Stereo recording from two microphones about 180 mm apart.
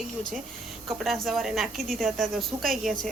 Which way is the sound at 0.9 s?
Centre (ahead or behind).